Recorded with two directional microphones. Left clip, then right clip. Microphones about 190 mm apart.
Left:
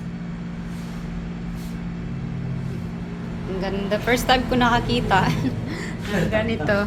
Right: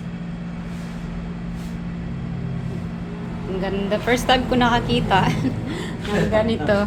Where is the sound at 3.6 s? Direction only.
10° right (ahead or behind).